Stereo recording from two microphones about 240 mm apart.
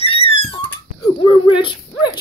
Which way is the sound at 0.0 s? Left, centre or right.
Left.